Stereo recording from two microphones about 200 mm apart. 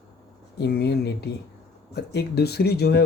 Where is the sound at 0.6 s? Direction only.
55° left (ahead or behind).